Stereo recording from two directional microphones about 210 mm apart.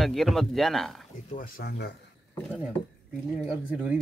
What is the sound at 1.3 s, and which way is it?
Speech, 45° left (ahead or behind).